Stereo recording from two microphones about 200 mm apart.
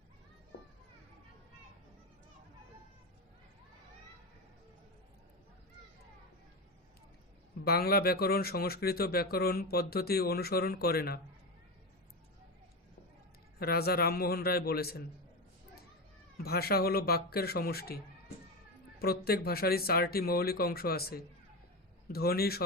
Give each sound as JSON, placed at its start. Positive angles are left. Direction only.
{"t": 7.6, "sound": "speech", "side_deg": 50}
{"t": 13.6, "sound": "speech", "side_deg": 50}
{"t": 16.4, "sound": "speech", "side_deg": 50}